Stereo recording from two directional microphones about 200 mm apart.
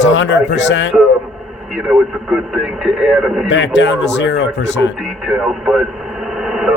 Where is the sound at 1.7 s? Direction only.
5° right (ahead or behind).